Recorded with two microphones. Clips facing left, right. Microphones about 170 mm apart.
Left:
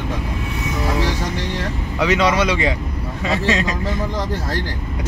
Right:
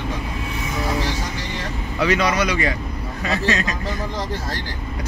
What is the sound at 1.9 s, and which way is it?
Speech, 20° left (ahead or behind).